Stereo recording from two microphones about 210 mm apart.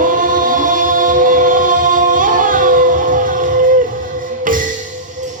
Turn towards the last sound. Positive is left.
turn(degrees=-40)  # may be behind; listen again after turning